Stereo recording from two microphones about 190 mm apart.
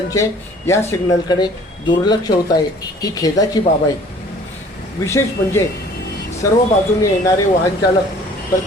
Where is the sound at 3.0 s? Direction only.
20° left (ahead or behind).